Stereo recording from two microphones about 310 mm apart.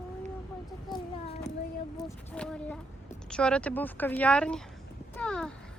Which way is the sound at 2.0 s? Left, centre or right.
Centre.